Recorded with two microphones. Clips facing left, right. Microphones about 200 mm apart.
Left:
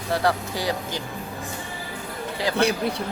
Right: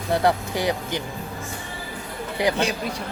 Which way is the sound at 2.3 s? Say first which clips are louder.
Right 4 dB; 20° right (ahead or behind).